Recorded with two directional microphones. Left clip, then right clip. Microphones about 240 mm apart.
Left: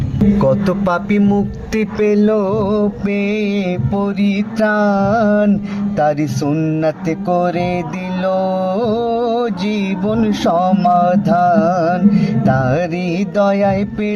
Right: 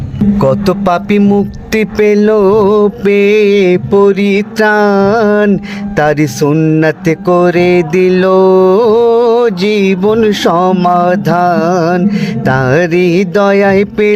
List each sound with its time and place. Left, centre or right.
0.3 s music: right